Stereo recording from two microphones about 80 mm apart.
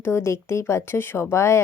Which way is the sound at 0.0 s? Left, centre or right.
Left.